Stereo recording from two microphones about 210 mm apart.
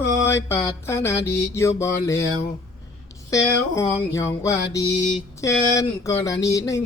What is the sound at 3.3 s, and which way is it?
Mantra, 15° left (ahead or behind).